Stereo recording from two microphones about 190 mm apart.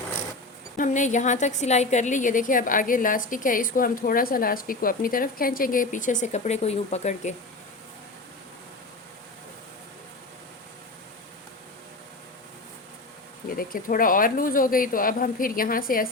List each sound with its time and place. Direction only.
0.8 s a woman's voice: 40° left (ahead or behind)
13.6 s a woman's voice: 45° left (ahead or behind)